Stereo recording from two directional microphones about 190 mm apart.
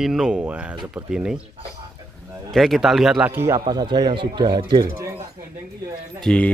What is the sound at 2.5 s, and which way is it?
A man's voice, centre (ahead or behind).